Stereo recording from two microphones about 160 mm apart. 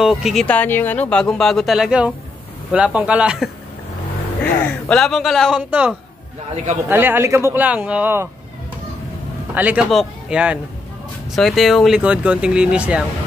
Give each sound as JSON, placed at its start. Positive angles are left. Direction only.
{"t": 0.0, "sound": "speech", "side_deg": 0}
{"t": 4.4, "sound": "speech", "side_deg": 5}
{"t": 6.5, "sound": "a man's voice", "side_deg": -45}
{"t": 6.9, "sound": "speech", "side_deg": -15}
{"t": 9.5, "sound": "speech", "side_deg": -10}